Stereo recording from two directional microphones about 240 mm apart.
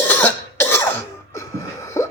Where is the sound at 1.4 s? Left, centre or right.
Centre.